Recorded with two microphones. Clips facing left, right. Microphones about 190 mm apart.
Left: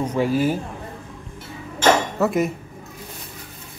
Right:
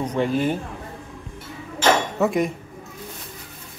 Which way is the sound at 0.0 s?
5° left (ahead or behind).